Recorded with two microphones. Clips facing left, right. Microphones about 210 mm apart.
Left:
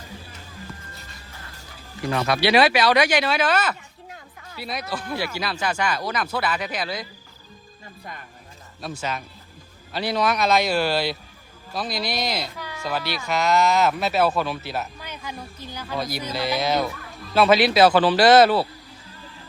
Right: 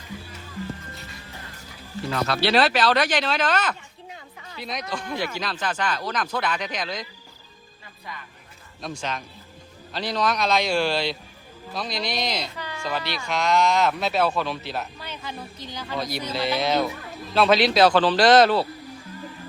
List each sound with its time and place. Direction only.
2.2 s speech: 10° left (ahead or behind)
8.1 s speech: 50° left (ahead or behind)
8.8 s speech: 5° left (ahead or behind)